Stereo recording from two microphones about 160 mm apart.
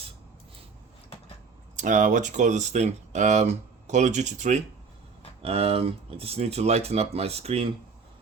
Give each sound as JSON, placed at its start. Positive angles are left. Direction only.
{"t": 1.7, "sound": "speech", "side_deg": -55}
{"t": 5.4, "sound": "speech", "side_deg": -40}